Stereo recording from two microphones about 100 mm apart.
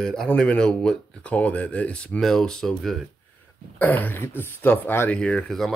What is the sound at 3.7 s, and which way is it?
Speech, 15° left (ahead or behind).